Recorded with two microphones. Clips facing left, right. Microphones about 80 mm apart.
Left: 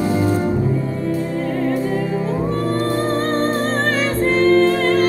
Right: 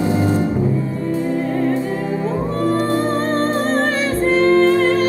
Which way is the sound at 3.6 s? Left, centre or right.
Centre.